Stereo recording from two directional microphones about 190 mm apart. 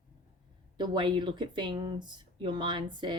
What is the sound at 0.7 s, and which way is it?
Speech, 25° right (ahead or behind).